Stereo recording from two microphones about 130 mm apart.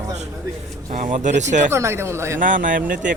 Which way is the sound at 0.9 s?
70° right (ahead or behind).